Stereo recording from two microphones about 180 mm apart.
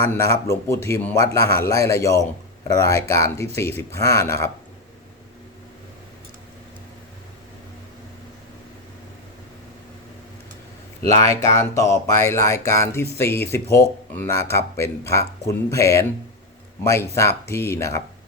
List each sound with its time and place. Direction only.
0.1 s speech: 15° left (ahead or behind)
11.2 s speech: 15° left (ahead or behind)